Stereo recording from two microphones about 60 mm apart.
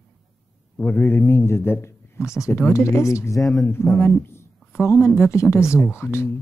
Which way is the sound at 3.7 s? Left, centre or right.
Left.